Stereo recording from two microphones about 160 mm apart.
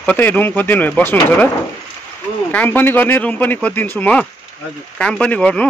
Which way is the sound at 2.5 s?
10° left (ahead or behind).